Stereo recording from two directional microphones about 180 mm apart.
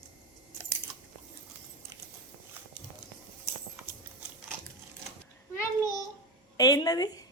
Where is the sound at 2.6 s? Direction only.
10° right (ahead or behind).